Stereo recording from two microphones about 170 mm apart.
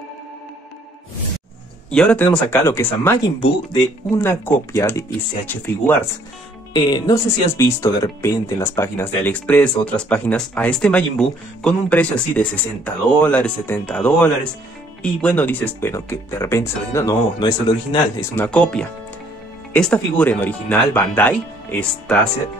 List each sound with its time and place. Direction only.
1.9 s speech: 5° left (ahead or behind)
6.7 s speech: 25° left (ahead or behind)
18.3 s speech: 10° left (ahead or behind)